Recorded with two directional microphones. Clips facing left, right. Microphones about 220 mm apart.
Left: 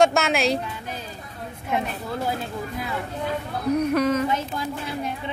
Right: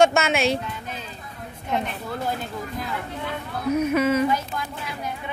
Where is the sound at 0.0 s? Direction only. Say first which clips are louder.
Right 1 dB; centre (ahead or behind).